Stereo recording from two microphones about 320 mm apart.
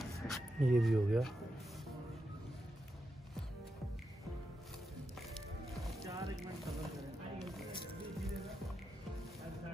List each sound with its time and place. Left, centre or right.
0.0 s a sound: centre
5.3 s music: centre
8.2 s music: centre